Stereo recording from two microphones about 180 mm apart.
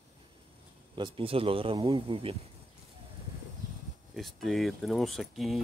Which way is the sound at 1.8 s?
20° right (ahead or behind).